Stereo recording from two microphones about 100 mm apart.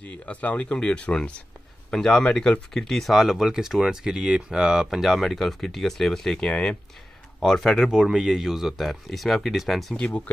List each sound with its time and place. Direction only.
0.0 s speech: 15° left (ahead or behind)